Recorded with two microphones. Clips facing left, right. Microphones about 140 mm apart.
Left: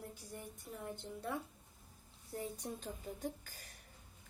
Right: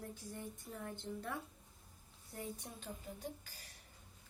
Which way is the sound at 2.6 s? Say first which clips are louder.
Left 5 dB; 40° left (ahead or behind).